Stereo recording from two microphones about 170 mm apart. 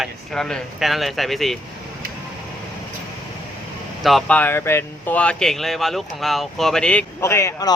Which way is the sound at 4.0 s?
Centre (ahead or behind).